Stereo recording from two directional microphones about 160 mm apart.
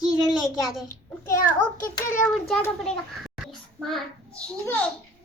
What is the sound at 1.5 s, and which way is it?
Speech, 55° left (ahead or behind).